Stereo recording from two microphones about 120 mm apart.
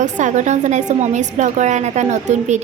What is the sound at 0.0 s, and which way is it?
A woman's voice, 90° right.